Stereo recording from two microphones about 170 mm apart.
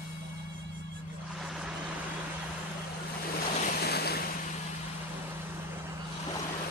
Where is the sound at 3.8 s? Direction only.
70° left (ahead or behind).